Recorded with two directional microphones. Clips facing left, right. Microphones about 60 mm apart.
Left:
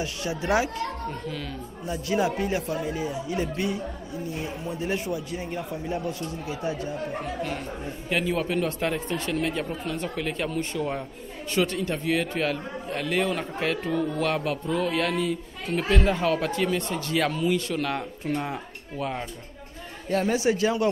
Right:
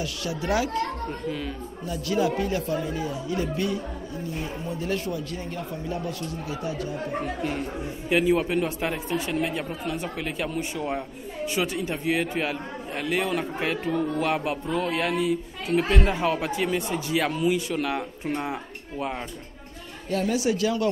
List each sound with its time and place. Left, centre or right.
0.0 s a man's voice: left
1.9 s a man's voice: left
8.1 s a man's voice: centre
20.1 s speech: left